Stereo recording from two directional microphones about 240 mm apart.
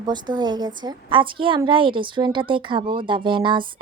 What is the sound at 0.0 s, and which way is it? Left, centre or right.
Speech, centre.